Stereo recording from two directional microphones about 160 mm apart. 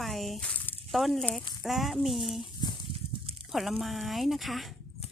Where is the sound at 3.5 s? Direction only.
Centre (ahead or behind).